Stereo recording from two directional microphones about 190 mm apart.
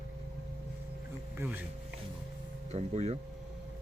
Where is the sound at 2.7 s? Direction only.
35° right (ahead or behind).